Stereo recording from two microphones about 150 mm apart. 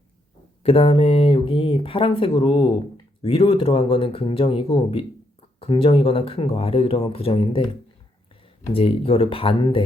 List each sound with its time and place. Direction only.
0.6 s speech: 40° left (ahead or behind)
8.7 s speech: 40° left (ahead or behind)